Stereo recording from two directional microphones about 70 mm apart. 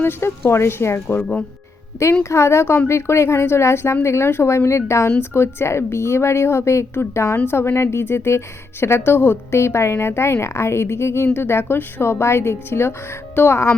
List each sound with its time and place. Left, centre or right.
0.0 s a woman's voice: left
2.3 s a woman's voice: left